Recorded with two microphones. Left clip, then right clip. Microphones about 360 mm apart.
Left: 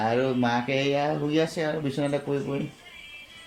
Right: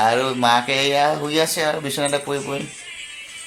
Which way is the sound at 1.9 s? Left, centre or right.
Right.